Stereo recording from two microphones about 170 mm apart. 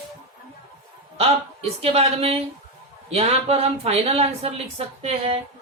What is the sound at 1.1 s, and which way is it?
Speech, 35° right (ahead or behind).